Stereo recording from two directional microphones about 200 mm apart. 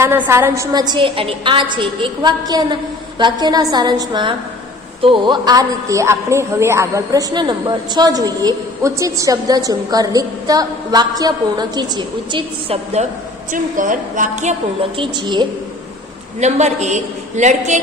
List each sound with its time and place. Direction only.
0.0 s a woman's voice: 10° right (ahead or behind)
0.7 s a woman's voice: 20° right (ahead or behind)
13.5 s a woman's voice: 40° right (ahead or behind)
15.0 s a woman's voice: 25° right (ahead or behind)
16.3 s a woman's voice: 35° right (ahead or behind)